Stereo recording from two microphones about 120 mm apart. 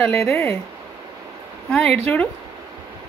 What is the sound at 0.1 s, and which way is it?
Speech, 20° left (ahead or behind).